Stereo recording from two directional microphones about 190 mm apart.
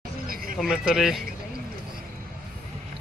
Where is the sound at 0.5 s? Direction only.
Centre (ahead or behind).